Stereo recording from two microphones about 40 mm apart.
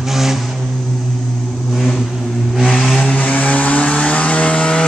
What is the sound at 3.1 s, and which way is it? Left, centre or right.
Vehicle, left.